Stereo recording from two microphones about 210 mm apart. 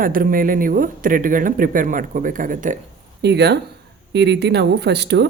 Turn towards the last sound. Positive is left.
turn(degrees=-55)  # may be behind; listen again after turning